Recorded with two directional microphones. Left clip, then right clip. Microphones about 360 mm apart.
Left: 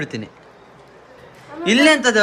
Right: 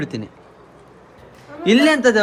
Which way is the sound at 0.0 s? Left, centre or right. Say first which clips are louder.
Even; centre.